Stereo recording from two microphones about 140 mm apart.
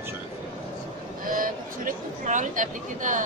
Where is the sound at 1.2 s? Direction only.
80° right.